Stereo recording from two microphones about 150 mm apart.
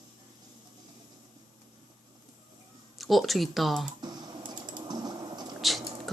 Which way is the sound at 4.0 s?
30° right (ahead or behind).